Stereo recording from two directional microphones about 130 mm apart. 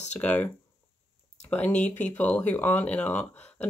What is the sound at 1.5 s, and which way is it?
Speech, 10° left (ahead or behind).